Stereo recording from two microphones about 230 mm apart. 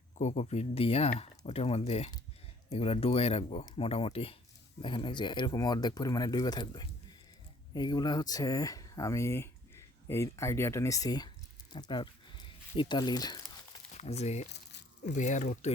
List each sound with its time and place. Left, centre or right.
0.2 s speech: left
13.9 s speech: left
14.5 s crumpling: left
15.1 s speech: left